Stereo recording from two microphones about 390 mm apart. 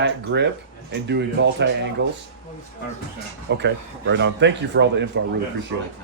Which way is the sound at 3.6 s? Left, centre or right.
Right.